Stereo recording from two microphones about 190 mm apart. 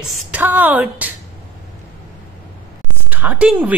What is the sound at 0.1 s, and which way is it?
Speech, 10° right (ahead or behind).